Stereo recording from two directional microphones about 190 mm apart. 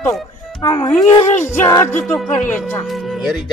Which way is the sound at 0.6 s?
15° left (ahead or behind).